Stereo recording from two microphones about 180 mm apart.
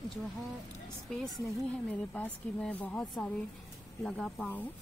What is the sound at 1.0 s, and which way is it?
A woman's voice, centre (ahead or behind).